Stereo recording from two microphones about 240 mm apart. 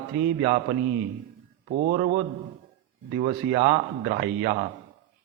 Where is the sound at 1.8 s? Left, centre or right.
Right.